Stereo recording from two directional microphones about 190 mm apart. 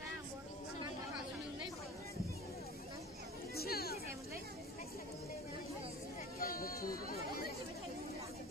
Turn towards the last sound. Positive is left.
turn(degrees=50)  # may be behind; listen again after turning